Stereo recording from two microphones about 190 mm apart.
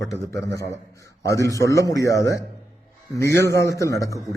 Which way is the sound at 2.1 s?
60° right (ahead or behind).